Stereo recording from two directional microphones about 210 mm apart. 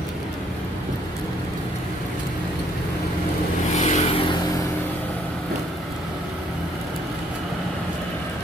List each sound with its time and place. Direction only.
3.7 s vehicle: 35° left (ahead or behind)